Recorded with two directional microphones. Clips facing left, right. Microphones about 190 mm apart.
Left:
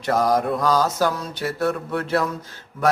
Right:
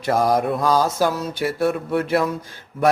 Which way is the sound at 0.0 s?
10° right (ahead or behind).